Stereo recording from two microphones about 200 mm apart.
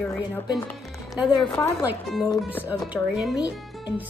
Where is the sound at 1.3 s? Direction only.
25° left (ahead or behind).